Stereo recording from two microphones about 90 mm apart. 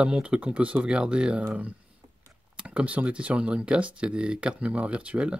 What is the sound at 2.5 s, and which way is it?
Speech, 15° right (ahead or behind).